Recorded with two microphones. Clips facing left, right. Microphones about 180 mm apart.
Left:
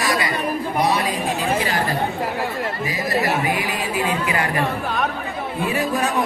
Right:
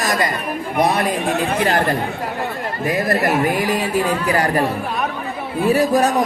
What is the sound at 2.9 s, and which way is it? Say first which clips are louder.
Speech: right 6 dB; 55° right (ahead or behind).